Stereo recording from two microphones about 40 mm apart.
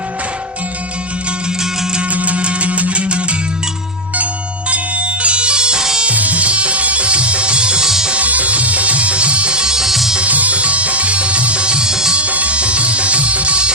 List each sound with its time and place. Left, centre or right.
2.1 s music: right
4.7 s music: right
6.1 s music: right
7.9 s music: centre
8.1 s music: right; by 10.2 s centre
10.2 s music: right; by 12.1 s centre
12.1 s music: right